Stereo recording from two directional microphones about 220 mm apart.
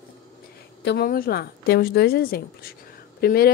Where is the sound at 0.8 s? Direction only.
45° left (ahead or behind).